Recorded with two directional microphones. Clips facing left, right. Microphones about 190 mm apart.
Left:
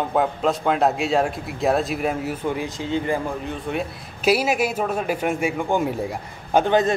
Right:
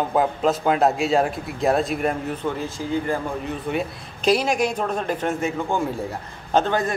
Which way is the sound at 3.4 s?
Centre (ahead or behind).